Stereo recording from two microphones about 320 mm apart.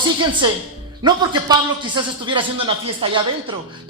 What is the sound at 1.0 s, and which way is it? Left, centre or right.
A man's voice, centre.